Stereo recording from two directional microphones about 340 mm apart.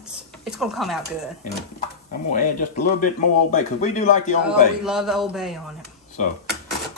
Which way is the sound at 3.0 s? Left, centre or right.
Left.